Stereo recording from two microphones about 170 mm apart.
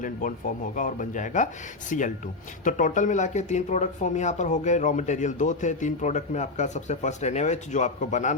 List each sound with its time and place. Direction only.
0.0 s speech: 50° left (ahead or behind)